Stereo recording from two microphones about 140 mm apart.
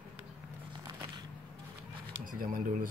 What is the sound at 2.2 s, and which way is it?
Speech, 90° right.